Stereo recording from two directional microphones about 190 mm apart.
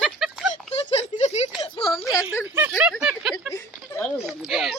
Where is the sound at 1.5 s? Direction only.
25° left (ahead or behind).